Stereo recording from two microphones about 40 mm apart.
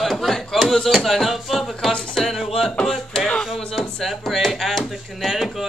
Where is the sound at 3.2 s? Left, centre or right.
Left.